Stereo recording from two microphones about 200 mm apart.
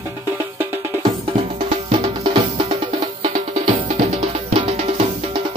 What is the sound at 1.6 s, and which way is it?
Music, 30° right (ahead or behind).